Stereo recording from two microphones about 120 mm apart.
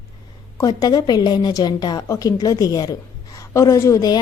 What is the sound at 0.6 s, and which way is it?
A woman's voice, 30° left (ahead or behind).